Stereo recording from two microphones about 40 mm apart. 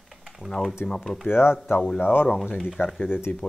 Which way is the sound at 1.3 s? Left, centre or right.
Left.